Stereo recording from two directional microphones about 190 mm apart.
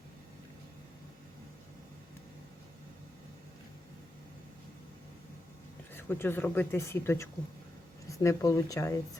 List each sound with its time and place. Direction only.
5.9 s speech: 10° left (ahead or behind)